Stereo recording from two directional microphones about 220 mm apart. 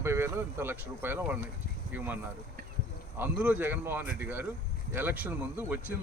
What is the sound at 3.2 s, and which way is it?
Speech, 10° right (ahead or behind).